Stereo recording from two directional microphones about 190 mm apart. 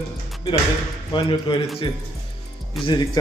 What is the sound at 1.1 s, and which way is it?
Speech, 25° left (ahead or behind).